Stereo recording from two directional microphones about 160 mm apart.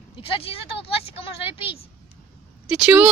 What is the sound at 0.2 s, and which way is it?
Speech, 35° left (ahead or behind).